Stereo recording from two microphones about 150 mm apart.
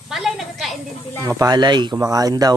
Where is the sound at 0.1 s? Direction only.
Centre (ahead or behind).